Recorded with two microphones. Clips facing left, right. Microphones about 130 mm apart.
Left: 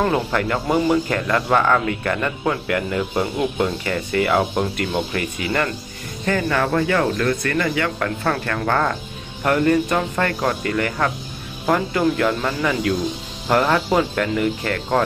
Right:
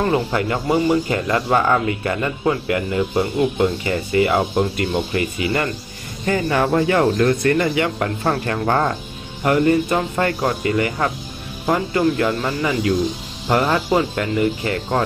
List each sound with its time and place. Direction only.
0.3 s speech: 10° right (ahead or behind)
6.2 s speech: 20° right (ahead or behind)
9.4 s speech: 10° right (ahead or behind)